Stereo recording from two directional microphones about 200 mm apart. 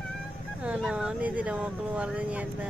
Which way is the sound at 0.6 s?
5° right (ahead or behind).